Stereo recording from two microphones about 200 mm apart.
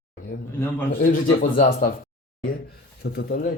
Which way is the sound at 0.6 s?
10° left (ahead or behind).